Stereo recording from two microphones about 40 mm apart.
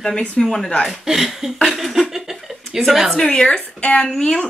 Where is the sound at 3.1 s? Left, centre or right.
Centre.